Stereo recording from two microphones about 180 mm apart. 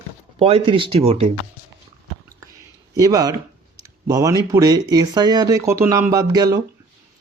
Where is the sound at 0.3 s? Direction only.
35° right (ahead or behind).